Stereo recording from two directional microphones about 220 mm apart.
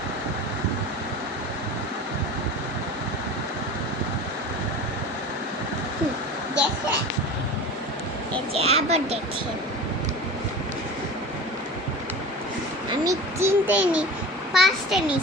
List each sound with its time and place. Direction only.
8.5 s a child's voice: 30° right (ahead or behind)
13.1 s a child's voice: 10° right (ahead or behind)